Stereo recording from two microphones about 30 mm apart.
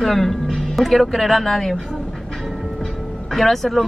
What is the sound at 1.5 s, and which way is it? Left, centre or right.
Speech, centre.